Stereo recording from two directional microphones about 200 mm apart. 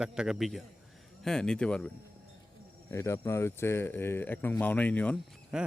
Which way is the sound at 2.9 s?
15° left (ahead or behind).